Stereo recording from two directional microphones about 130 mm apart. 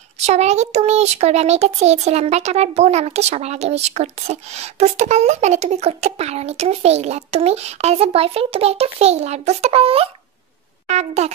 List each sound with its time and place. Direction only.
0.3 s a child's voice: 55° right (ahead or behind)
10.9 s speech: 60° right (ahead or behind)